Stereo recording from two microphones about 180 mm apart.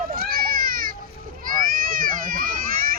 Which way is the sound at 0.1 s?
55° right (ahead or behind).